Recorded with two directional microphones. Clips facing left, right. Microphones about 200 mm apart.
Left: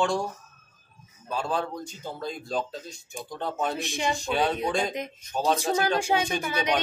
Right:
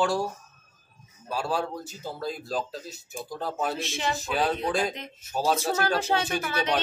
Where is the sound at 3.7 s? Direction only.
15° left (ahead or behind).